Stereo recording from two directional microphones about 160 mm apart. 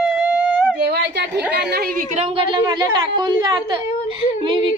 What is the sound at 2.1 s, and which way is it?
A woman's voice, 40° right (ahead or behind).